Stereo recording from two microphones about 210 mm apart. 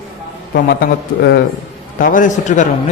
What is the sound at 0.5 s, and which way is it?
Speech, 50° left (ahead or behind).